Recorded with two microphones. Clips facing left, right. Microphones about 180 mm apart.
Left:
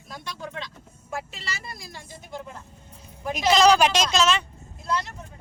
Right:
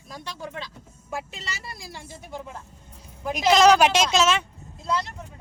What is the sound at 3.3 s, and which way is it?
Speech, centre (ahead or behind).